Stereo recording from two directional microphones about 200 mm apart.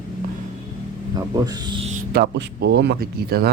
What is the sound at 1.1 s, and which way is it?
Speech, 20° right (ahead or behind).